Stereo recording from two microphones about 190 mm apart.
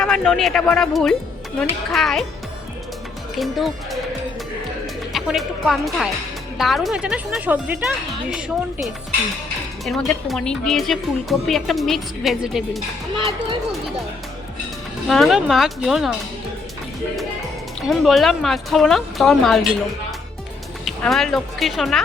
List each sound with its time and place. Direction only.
0.0 s a woman's voice: centre (ahead or behind)
3.3 s a woman's voice: centre (ahead or behind)
5.1 s a woman's voice: centre (ahead or behind)
13.1 s speech: 25° right (ahead or behind)
15.0 s a woman's voice: centre (ahead or behind)
17.8 s a woman's voice: centre (ahead or behind)
20.8 s speech: centre (ahead or behind)